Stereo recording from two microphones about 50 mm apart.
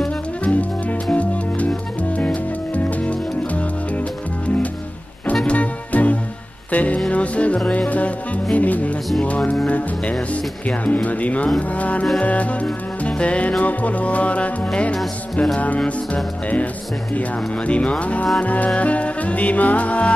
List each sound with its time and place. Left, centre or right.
0.4 s music: left
5.2 s music: left
17.1 s music: left